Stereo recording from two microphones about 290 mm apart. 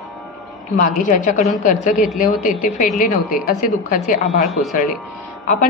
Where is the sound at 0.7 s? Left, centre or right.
Left.